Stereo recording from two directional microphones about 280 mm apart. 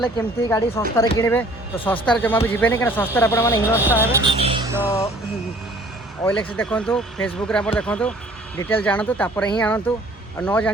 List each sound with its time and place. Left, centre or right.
0.2 s speech: centre
3.8 s speech: centre
4.3 s a sound: centre
6.2 s speech: centre